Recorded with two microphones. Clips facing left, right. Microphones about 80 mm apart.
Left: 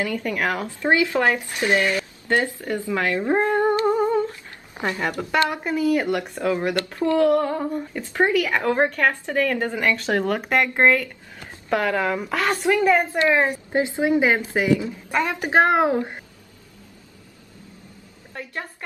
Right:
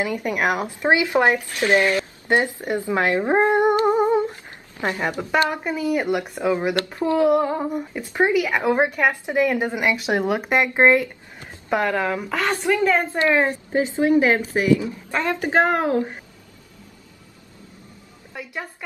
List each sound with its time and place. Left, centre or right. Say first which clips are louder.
0.0 s speech: right 2 dB; centre
1.4 s speech: right 2 dB; centre
1.7 s a sound: right 3 dB; right
4.8 s speech: right 1 dB; right
5.3 s speech: even; centre
12.7 s a woman's voice: left 2 dB; centre
18.3 s a woman's voice: even; centre